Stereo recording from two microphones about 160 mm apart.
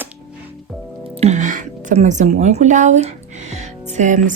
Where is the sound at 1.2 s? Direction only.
50° right (ahead or behind).